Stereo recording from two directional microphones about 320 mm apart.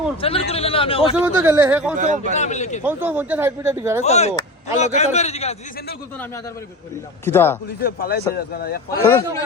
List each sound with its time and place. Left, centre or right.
0.2 s a man's voice: centre
1.1 s a man's voice: centre
2.0 s a man's voice: right
2.3 s a man's voice: left
2.8 s speech: centre
4.0 s a man's voice: centre
7.3 s a man's voice: centre
7.8 s a man's voice: left
8.9 s a man's voice: centre